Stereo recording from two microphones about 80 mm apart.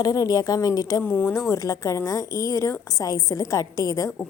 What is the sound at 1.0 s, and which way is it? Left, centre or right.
Speech, left.